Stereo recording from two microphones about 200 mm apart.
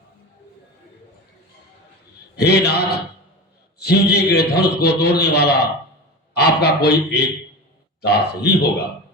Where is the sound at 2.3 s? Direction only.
55° left (ahead or behind).